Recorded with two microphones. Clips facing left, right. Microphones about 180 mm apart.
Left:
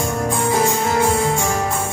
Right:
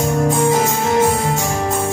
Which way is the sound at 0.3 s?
25° right (ahead or behind).